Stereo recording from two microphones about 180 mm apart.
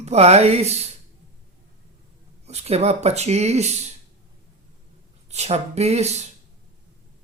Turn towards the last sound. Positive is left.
turn(degrees=-35)  # may be behind; listen again after turning